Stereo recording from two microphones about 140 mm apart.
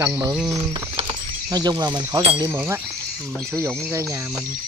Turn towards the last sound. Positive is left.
turn(degrees=-20)  # may be behind; listen again after turning